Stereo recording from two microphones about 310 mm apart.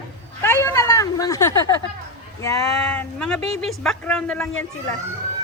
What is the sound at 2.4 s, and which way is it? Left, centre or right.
A woman's voice, centre.